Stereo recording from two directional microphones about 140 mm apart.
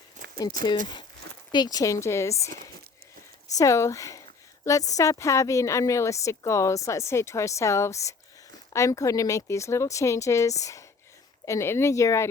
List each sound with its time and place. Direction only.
0.2 s clip-clop: 60° right (ahead or behind)
1.5 s a woman's voice: 30° left (ahead or behind)
3.6 s a woman's voice: 20° left (ahead or behind)